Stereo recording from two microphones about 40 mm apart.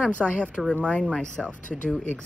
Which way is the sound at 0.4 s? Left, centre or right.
Left.